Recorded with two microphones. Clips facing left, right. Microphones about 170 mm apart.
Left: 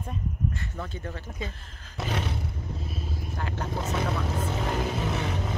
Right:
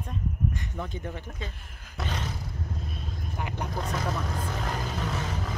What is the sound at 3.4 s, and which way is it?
Vehicle, 15° right (ahead or behind).